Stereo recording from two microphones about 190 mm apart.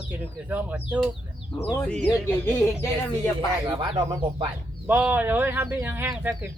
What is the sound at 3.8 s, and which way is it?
Speech, 25° right (ahead or behind).